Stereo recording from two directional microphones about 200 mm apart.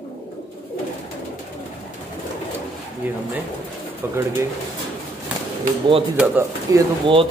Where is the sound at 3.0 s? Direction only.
10° right (ahead or behind).